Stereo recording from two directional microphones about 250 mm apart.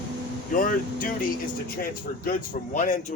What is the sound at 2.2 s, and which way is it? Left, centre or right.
Speech, left.